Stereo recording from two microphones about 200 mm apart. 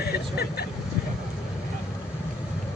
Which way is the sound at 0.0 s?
50° left (ahead or behind).